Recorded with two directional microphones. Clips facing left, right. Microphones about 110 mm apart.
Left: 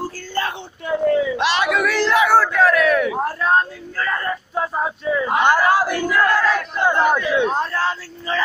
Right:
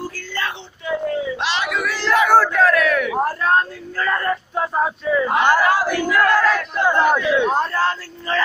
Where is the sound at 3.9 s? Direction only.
Centre (ahead or behind).